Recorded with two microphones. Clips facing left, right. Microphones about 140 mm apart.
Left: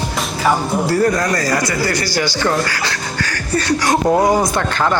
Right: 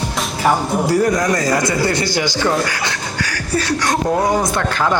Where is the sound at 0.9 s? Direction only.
15° right (ahead or behind).